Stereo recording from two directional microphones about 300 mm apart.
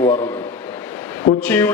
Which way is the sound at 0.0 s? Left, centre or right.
Centre.